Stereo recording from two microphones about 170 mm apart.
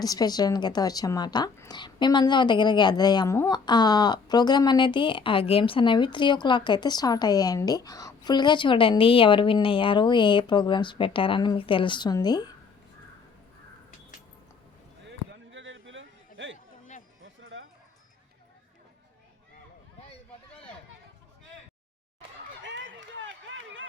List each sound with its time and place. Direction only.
0.0 s a woman's voice: 20° left (ahead or behind)
15.4 s a sound: 90° right
22.6 s run: 90° right